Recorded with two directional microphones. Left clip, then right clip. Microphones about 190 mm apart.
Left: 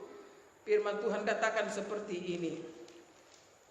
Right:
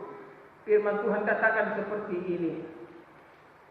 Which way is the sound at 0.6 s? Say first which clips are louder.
Right 6 dB; 60° left (ahead or behind).